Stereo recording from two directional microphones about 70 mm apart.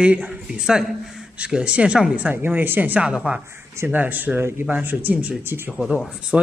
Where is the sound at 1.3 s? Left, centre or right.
Centre.